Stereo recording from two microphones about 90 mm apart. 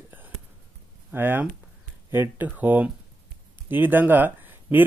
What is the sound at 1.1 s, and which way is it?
Speech, 20° right (ahead or behind).